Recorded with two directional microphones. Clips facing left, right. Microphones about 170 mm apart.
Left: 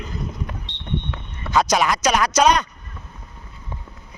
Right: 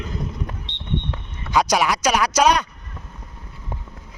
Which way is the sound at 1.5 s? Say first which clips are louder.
Even; 10° right (ahead or behind).